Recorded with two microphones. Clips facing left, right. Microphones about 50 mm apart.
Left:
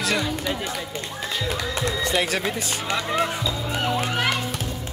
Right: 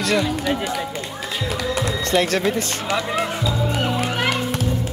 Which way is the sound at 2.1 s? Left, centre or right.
Centre.